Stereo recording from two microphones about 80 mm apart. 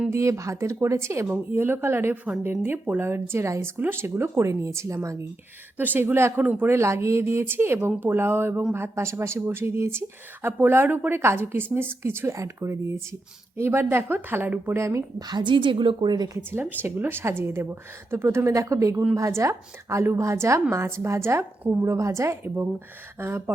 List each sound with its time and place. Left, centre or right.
0.1 s a woman's voice: right
5.7 s speech: right
6.4 s speech: centre
6.7 s a woman's voice: right
14.8 s a woman's voice: right
15.3 s a woman's voice: right
16.5 s a woman's voice: right
21.6 s a woman's voice: right
21.8 s a woman's voice: right